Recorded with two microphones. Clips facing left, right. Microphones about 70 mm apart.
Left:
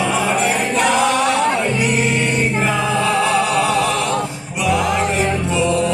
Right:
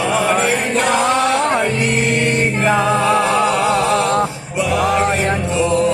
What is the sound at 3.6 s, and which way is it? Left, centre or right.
Male singing, right.